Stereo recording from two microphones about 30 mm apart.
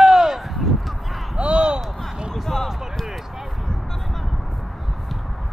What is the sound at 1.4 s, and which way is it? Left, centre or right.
Basketball bounce, right.